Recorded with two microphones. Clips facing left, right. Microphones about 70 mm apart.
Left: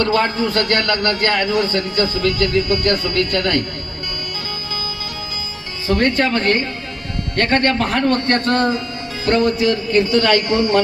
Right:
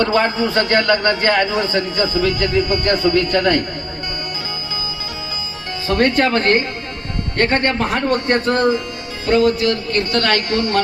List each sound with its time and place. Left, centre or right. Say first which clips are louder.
0.0 s a man's voice: right 1 dB; centre
5.9 s speech: right 1 dB; right
7.3 s a man's voice: left 1 dB; right; by 10.2 s centre